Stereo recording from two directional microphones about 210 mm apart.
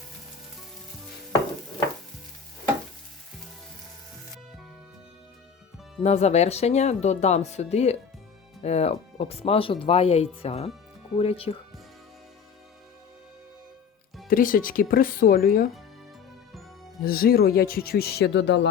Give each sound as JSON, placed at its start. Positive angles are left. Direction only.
{"t": 6.0, "sound": "speech", "side_deg": 30}
{"t": 14.3, "sound": "speech", "side_deg": 40}
{"t": 17.0, "sound": "speech", "side_deg": 45}